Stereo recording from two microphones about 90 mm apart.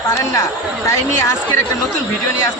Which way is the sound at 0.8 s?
35° left (ahead or behind).